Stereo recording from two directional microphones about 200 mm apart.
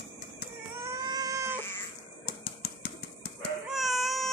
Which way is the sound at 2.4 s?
50° left (ahead or behind).